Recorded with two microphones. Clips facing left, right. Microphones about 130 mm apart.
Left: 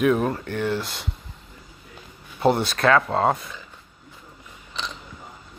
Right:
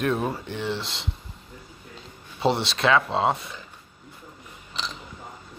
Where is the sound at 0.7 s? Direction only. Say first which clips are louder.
Left 4 dB; 25° right (ahead or behind).